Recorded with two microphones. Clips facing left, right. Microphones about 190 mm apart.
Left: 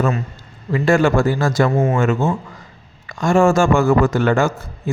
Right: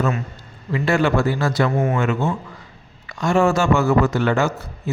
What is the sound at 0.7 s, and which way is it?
A man's voice, 45° left (ahead or behind).